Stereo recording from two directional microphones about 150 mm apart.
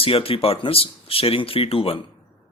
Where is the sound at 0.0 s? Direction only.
40° left (ahead or behind).